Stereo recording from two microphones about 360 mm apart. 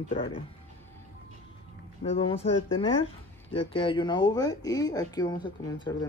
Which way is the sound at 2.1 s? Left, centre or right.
Centre.